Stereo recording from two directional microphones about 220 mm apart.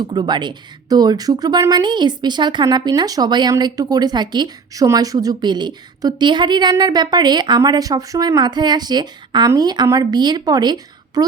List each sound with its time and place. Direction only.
0.1 s a woman's voice: 20° right (ahead or behind)